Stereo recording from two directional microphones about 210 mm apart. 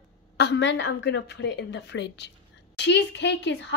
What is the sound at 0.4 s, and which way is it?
A woman's voice, 55° left (ahead or behind).